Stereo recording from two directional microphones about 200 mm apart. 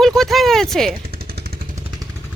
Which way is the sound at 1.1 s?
50° right (ahead or behind).